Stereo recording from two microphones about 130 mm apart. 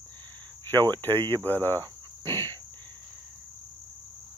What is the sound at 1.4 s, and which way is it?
Cricket, 15° left (ahead or behind).